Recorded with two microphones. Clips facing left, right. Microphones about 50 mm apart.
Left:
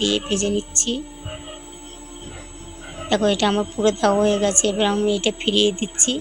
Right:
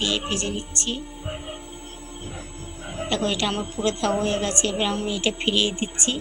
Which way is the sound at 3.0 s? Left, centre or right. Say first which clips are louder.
Left 6 dB; left.